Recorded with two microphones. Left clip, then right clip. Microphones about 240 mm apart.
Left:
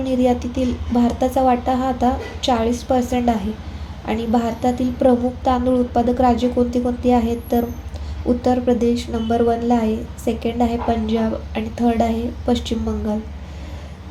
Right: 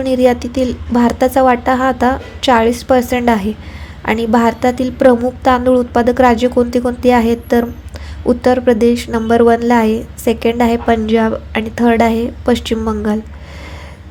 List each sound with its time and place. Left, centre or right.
0.0 s a woman's voice: right